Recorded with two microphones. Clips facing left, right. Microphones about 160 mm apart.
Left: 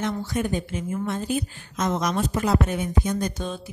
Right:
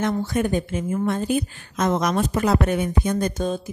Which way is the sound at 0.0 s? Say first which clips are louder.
Right 4 dB; 55° right (ahead or behind).